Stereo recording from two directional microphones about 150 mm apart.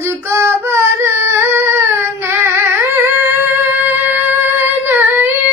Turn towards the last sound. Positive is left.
turn(degrees=-15)  # may be behind; listen again after turning